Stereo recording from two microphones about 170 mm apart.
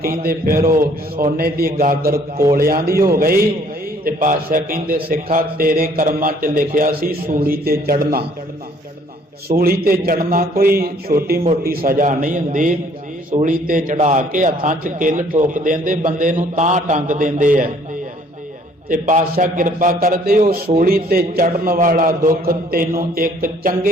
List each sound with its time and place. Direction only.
0.0 s a man's voice: 60° right (ahead or behind)
9.6 s a man's voice: 60° right (ahead or behind)
18.9 s a man's voice: 50° right (ahead or behind)